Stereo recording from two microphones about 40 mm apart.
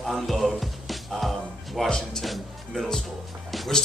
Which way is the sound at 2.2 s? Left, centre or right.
Centre.